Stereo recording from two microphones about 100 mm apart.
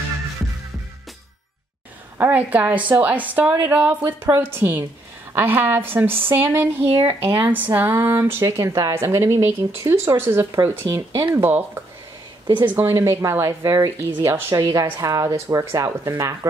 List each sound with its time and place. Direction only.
2.1 s a woman's voice: 15° right (ahead or behind)
6.8 s speech: 80° right
7.2 s speech: 20° right (ahead or behind); by 8.9 s 35° right (ahead or behind)
8.9 s speech: 25° right (ahead or behind)